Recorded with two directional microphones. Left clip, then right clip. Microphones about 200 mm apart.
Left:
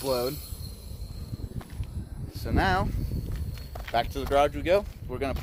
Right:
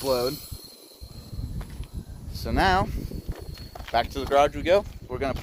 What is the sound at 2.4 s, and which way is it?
Speech, 45° right (ahead or behind).